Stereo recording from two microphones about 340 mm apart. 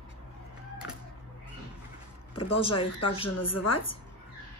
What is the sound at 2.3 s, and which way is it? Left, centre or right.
Speech, centre.